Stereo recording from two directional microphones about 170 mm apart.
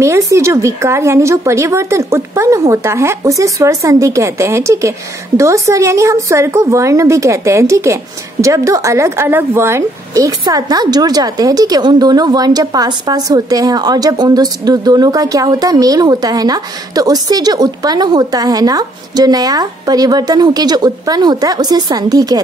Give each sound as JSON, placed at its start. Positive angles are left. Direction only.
{"t": 0.0, "sound": "a woman's voice", "side_deg": -15}